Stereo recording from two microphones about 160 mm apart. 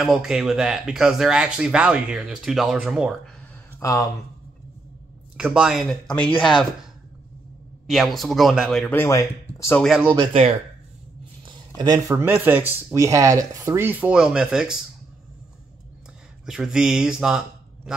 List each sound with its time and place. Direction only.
0.0 s speech: centre (ahead or behind)
3.8 s speech: 20° left (ahead or behind)
5.4 s speech: 5° right (ahead or behind)
8.9 s speech: 15° left (ahead or behind)
10.3 s speech: 40° right (ahead or behind)
11.4 s speech: 25° right (ahead or behind); by 14.8 s 5° right (ahead or behind)
16.4 s speech: 5° right (ahead or behind)